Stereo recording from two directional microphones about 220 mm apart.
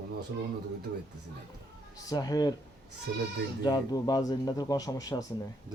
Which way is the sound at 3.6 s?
15° left (ahead or behind).